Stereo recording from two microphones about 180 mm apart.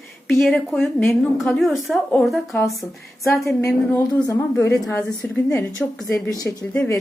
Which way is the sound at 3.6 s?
15° left (ahead or behind).